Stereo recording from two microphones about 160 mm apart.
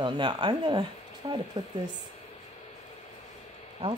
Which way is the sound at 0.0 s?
30° right (ahead or behind).